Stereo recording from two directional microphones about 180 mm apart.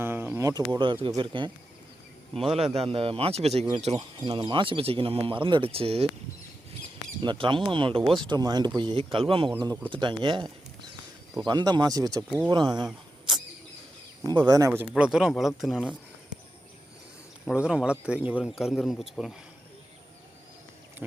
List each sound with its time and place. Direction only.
0.0 s a sound: 10° right (ahead or behind)
1.0 s speech: 25° right (ahead or behind)
2.7 s speech: 35° right (ahead or behind)
4.2 s speech: 25° right (ahead or behind)
7.2 s speech: 25° right (ahead or behind)
12.5 s a sound: 25° right (ahead or behind)
14.3 s speech: 25° right (ahead or behind); by 16.0 s 5° right (ahead or behind)
17.4 s speech: 5° right (ahead or behind)